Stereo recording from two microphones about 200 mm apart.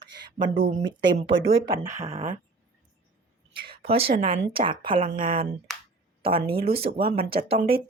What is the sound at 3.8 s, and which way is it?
A woman's voice, 30° right (ahead or behind).